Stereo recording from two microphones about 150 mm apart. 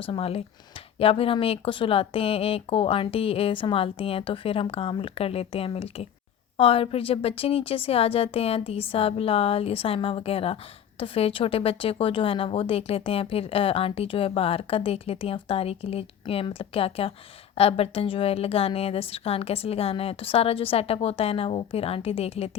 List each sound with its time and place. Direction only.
0.0 s a woman's voice: 40° left (ahead or behind)